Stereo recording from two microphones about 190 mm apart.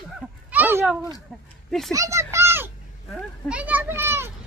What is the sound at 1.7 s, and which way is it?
Speech, centre (ahead or behind).